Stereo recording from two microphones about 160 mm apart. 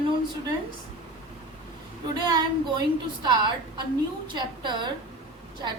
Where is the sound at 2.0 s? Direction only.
25° right (ahead or behind).